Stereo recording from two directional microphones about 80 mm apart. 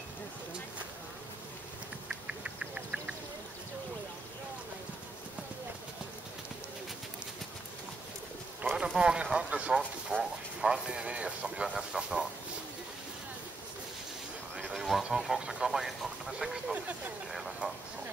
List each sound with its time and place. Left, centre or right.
2.0 s duck: centre
8.6 s speech: centre
14.6 s a sound: centre
15.0 s speech: centre
16.7 s speech: right
17.3 s a sound: centre